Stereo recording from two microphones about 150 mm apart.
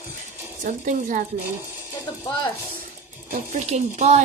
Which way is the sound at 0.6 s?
60° right (ahead or behind).